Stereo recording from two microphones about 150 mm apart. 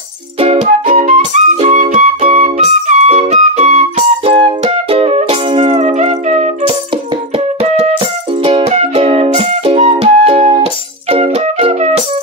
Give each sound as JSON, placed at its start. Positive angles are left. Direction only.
{"t": 0.4, "sound": "music", "side_deg": -45}